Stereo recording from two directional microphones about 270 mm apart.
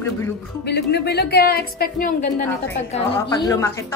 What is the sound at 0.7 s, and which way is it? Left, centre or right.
Speech, left.